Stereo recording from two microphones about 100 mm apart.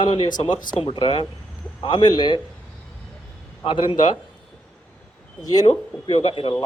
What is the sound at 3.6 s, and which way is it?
Speech, 60° left (ahead or behind).